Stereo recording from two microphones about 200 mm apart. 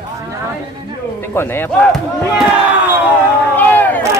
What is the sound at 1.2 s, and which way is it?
Speech, 10° left (ahead or behind).